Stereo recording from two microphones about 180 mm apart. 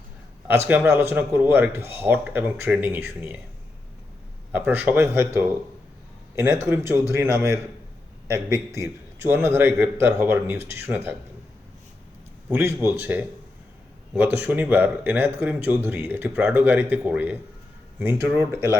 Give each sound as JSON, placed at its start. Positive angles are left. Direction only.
{"t": 0.7, "sound": "speech", "side_deg": -10}
{"t": 4.5, "sound": "speech", "side_deg": -10}
{"t": 12.5, "sound": "speech", "side_deg": -10}